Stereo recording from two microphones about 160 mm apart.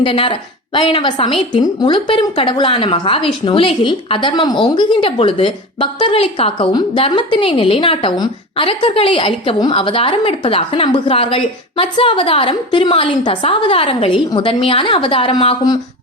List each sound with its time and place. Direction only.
0.0 s a woman's voice: 30° left (ahead or behind)